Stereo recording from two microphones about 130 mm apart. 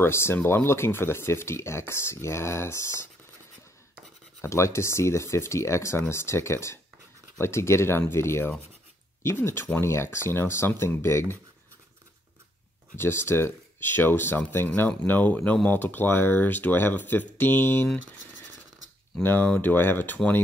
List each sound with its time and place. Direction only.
0.0 s speech: 20° left (ahead or behind)
4.4 s speech: 20° left (ahead or behind)
12.9 s speech: 20° left (ahead or behind)
19.2 s speech: 10° left (ahead or behind)